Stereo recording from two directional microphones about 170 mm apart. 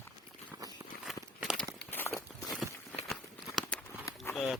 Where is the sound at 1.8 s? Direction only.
10° left (ahead or behind).